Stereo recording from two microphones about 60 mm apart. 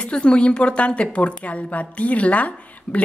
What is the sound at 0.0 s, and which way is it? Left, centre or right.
A woman's voice, centre.